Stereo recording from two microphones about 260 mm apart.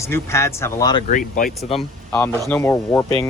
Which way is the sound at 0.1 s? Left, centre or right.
Centre.